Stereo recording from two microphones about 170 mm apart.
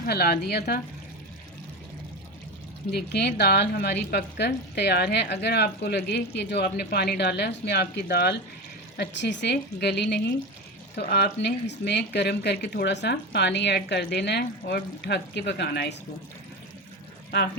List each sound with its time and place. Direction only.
0.0 s a woman's voice: 65° left (ahead or behind)
2.9 s a woman's voice: 75° left (ahead or behind)
9.0 s a woman's voice: 90° left
10.9 s speech: 75° left (ahead or behind)